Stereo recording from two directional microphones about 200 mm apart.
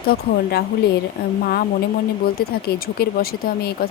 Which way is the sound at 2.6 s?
50° left (ahead or behind).